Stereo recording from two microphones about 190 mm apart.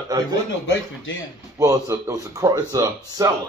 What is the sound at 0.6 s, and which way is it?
Speech, 90° left.